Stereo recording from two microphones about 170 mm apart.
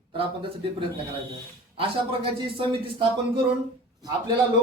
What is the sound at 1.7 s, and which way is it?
Speech, 30° right (ahead or behind).